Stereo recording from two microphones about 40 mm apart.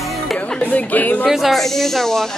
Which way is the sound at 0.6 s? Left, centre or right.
Left.